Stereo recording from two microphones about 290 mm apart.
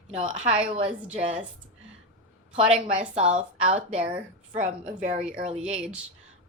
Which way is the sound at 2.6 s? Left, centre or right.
Centre.